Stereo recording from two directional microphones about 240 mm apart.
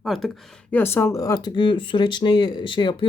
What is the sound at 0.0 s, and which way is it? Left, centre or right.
Speech, centre.